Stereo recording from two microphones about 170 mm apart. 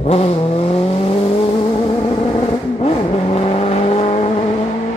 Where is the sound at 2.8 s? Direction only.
35° left (ahead or behind).